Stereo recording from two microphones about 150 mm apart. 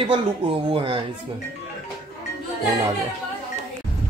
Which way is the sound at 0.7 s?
35° right (ahead or behind).